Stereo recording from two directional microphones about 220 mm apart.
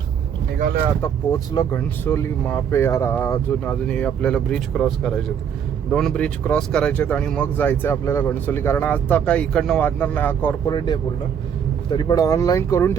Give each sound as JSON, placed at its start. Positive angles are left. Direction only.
{"t": 1.0, "sound": "speech", "side_deg": 10}
{"t": 10.7, "sound": "speech", "side_deg": 20}